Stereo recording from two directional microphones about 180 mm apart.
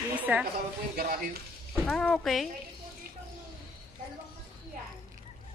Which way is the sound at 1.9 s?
5° left (ahead or behind).